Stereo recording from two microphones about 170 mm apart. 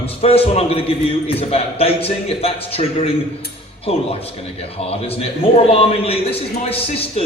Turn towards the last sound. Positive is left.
turn(degrees=35)  # may be behind; listen again after turning